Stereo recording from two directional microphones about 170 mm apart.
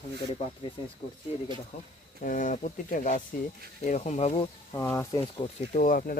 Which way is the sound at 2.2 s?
50° left (ahead or behind).